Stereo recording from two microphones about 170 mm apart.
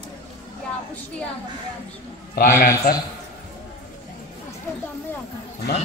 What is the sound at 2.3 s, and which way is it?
Speech, 55° left (ahead or behind).